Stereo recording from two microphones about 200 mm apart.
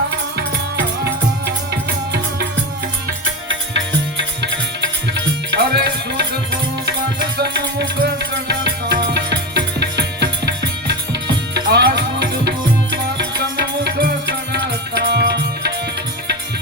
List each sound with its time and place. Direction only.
1.5 s music: 55° right (ahead or behind)
3.5 s tabla: 65° right (ahead or behind)
6.8 s music: 55° right (ahead or behind)
10.4 s tabla: 55° right (ahead or behind)